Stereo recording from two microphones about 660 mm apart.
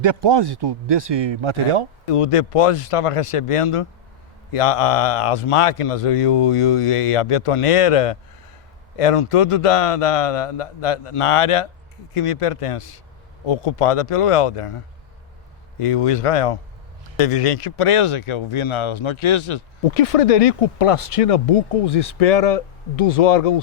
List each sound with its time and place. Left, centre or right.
0.0 s speech: right
2.0 s speech: left
15.8 s speech: left